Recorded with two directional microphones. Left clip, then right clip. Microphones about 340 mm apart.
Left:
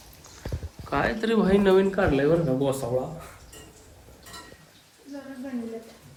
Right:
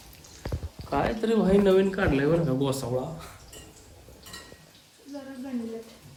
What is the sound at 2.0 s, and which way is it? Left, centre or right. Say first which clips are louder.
Speech: left 2 dB; centre.